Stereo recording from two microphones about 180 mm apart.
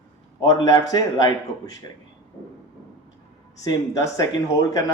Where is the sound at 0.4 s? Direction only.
20° left (ahead or behind).